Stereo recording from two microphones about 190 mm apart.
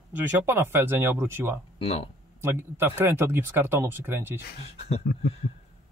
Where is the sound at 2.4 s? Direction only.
10° right (ahead or behind).